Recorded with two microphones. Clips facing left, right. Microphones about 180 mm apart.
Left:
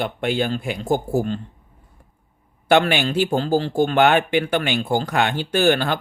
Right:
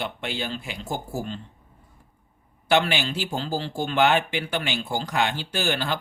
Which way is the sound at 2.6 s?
55° left (ahead or behind).